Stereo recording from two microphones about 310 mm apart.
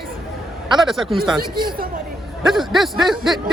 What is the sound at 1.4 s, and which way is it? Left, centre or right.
Speech, right.